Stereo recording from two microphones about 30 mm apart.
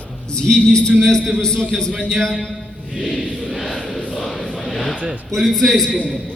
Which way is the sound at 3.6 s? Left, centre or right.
Left.